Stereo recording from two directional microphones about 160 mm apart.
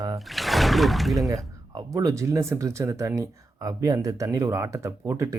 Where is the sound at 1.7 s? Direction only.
20° right (ahead or behind).